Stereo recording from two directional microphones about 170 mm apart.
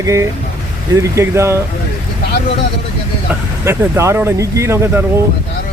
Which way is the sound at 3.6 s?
15° right (ahead or behind).